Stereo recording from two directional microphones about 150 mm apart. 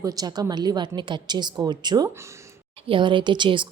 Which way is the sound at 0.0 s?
25° right (ahead or behind).